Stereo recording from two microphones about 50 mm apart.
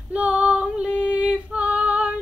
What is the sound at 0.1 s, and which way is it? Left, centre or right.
Female singing, right.